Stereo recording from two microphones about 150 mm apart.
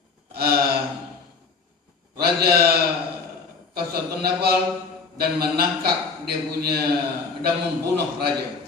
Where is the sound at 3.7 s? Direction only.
90° right.